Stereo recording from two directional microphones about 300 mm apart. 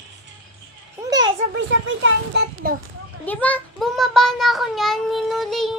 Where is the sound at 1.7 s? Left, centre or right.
Right.